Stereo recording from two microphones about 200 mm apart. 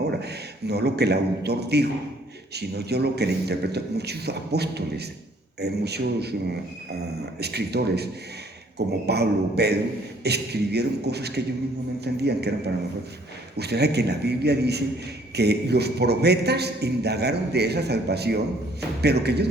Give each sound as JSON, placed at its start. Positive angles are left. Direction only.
{"t": 0.1, "sound": "a sound", "side_deg": -55}
{"t": 1.5, "sound": "a man's voice", "side_deg": -55}
{"t": 7.3, "sound": "a man's voice", "side_deg": -55}
{"t": 13.6, "sound": "a man's voice", "side_deg": -55}